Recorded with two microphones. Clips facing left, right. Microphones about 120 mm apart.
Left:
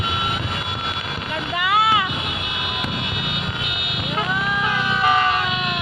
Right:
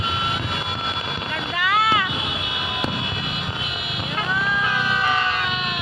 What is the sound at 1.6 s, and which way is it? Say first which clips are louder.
Boat: left 2 dB; 20° left (ahead or behind).